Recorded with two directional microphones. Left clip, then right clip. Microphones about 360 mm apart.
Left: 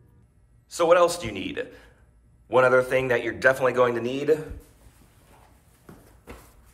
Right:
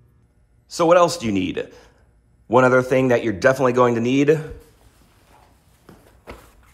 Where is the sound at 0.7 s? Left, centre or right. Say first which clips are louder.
Right 4 dB; centre.